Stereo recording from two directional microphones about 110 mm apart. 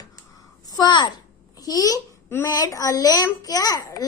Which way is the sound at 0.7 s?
40° left (ahead or behind).